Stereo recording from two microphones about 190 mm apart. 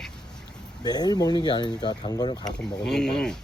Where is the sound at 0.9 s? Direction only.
20° left (ahead or behind).